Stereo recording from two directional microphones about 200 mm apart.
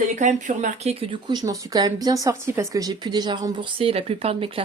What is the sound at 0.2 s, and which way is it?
Speech, 40° right (ahead or behind).